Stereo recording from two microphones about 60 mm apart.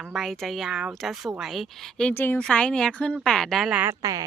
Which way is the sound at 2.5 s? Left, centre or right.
Centre.